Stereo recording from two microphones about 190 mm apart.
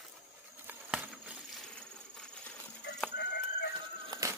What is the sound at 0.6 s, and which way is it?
Patter, 5° right (ahead or behind).